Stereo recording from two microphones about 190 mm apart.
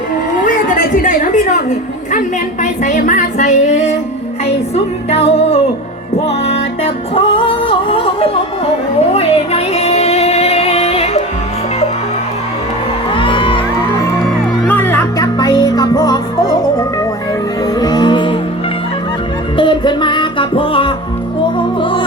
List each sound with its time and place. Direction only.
0.4 s a sound: 40° left (ahead or behind)
2.8 s music: 40° left (ahead or behind)
13.1 s music: 25° left (ahead or behind)
19.5 s music: 25° left (ahead or behind)